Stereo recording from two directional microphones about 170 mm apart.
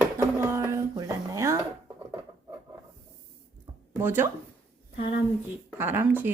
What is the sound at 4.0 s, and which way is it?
Speech, 15° right (ahead or behind).